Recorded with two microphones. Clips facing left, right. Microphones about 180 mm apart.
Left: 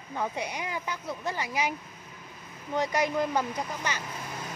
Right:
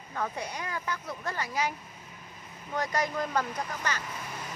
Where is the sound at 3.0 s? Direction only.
15° left (ahead or behind).